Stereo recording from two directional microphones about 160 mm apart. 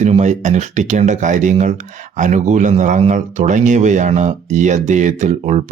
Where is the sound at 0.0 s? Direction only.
50° right (ahead or behind).